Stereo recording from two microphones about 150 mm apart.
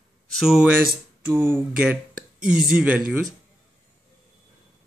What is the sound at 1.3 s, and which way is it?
Speech, 15° right (ahead or behind).